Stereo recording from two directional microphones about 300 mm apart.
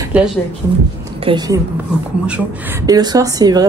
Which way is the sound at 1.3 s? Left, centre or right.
Centre.